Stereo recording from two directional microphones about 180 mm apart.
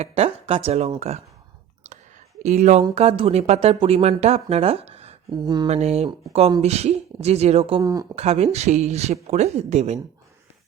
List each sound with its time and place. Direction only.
0.0 s speech: 35° right (ahead or behind)
2.4 s speech: 40° right (ahead or behind)
5.3 s speech: 25° right (ahead or behind)
5.6 s speech: 35° right (ahead or behind)
7.8 s speech: 20° right (ahead or behind)
8.1 s speech: 35° right (ahead or behind)